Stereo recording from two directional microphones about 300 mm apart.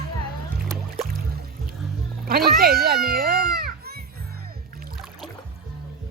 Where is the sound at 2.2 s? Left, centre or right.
Right.